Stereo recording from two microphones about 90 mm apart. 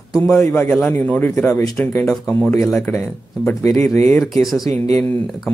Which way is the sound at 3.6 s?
35° left (ahead or behind).